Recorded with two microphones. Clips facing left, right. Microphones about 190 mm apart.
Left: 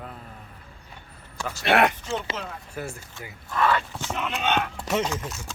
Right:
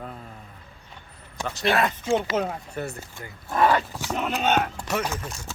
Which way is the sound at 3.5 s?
40° right (ahead or behind).